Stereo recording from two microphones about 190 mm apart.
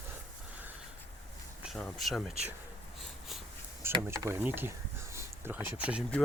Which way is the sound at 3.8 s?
15° right (ahead or behind).